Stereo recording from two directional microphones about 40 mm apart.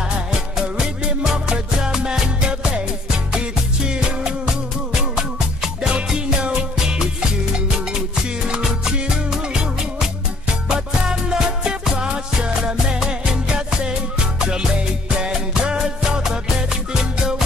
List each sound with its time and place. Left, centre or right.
0.7 s music: centre
8.6 s music: centre